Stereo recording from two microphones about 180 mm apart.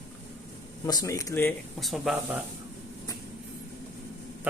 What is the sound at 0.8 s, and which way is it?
Speech, 20° left (ahead or behind).